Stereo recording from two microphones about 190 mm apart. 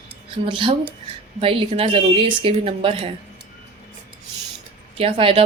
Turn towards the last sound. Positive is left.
turn(degrees=-30)  # may be behind; listen again after turning